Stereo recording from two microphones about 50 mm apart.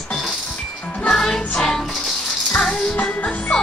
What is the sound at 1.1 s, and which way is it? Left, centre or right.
Music, centre.